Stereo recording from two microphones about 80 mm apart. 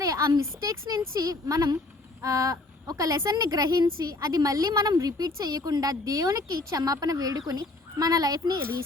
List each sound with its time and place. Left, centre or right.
0.0 s a woman's voice: right